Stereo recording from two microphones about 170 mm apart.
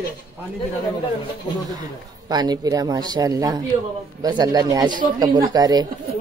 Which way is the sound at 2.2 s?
25° right (ahead or behind).